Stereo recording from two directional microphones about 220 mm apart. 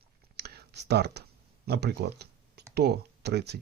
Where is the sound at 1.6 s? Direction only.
45° right (ahead or behind).